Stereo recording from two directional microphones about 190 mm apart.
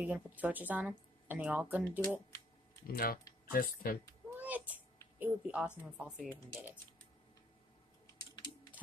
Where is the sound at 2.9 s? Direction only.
50° left (ahead or behind).